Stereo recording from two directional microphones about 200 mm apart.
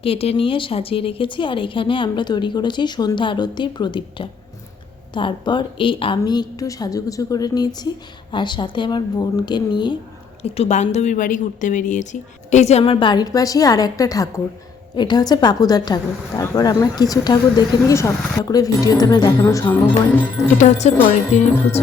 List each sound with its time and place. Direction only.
0.0 s a woman's voice: 30° left (ahead or behind)
20.6 s speech: 35° left (ahead or behind)